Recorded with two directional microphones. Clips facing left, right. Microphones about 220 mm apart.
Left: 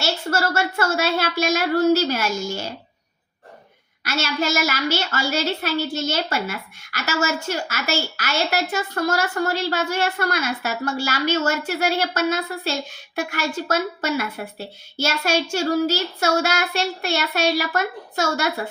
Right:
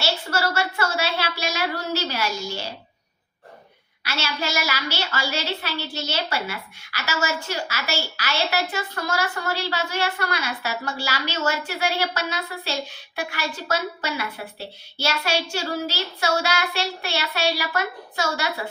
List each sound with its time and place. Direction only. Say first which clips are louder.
0.0 s a woman's voice: left 2 dB; 45° left (ahead or behind)
4.0 s a woman's voice: left 5 dB; 45° left (ahead or behind)